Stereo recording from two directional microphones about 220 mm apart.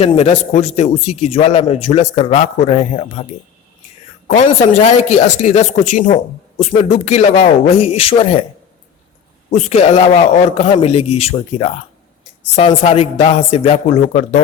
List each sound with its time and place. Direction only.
0.0 s a man's voice: 25° left (ahead or behind)
4.4 s a man's voice: 30° left (ahead or behind)
9.5 s a man's voice: 30° left (ahead or behind)